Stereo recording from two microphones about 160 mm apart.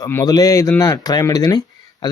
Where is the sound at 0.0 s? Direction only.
20° left (ahead or behind).